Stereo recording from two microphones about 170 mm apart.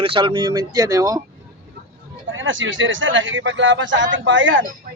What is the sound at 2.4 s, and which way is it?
A man's voice, 90° right.